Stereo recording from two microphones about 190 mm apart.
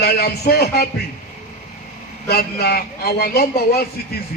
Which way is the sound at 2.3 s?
55° left (ahead or behind).